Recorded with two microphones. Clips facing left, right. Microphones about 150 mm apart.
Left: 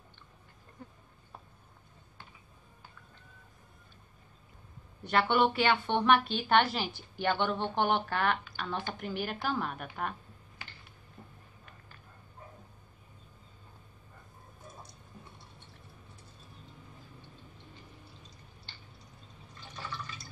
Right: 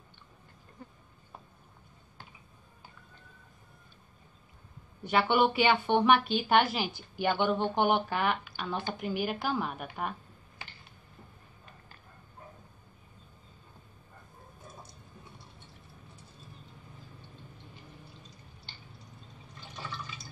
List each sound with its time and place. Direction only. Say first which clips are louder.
5.0 s speech: right 1 dB; 5° right (ahead or behind)